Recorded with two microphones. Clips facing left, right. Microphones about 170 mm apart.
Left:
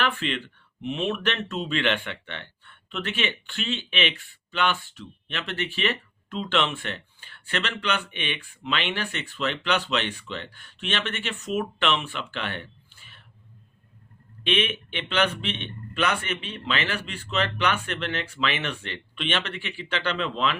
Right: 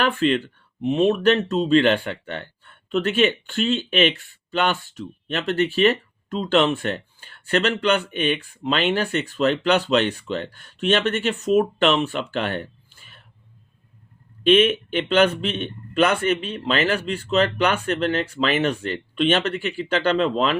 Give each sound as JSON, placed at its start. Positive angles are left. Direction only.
{"t": 0.0, "sound": "speech", "side_deg": -40}
{"t": 14.4, "sound": "speech", "side_deg": -40}